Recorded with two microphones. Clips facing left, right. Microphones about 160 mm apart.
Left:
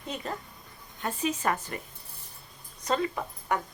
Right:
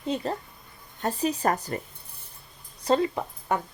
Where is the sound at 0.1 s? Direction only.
30° right (ahead or behind).